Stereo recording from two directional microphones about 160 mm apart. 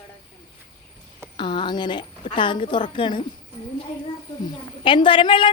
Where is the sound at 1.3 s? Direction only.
30° left (ahead or behind).